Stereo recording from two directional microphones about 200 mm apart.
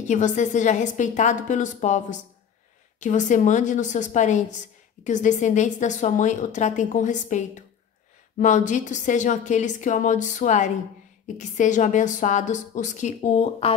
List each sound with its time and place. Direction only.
0.1 s a woman's voice: 35° left (ahead or behind)